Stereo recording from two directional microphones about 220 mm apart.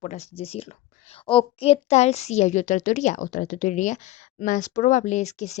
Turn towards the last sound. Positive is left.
turn(degrees=30)  # may be behind; listen again after turning